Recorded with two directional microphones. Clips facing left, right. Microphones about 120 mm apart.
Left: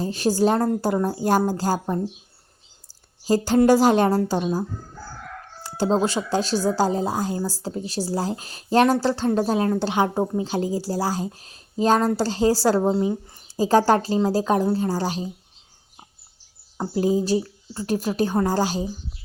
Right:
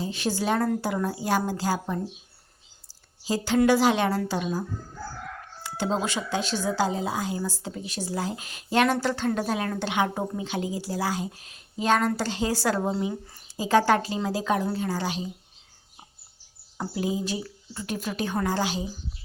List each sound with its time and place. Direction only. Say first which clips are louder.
0.0 s speech: left 7 dB; 40° left (ahead or behind)
3.2 s speech: left 5 dB; 45° left (ahead or behind)
5.6 s speech: left 6 dB; 35° left (ahead or behind)
16.9 s speech: left 8 dB; 35° left (ahead or behind)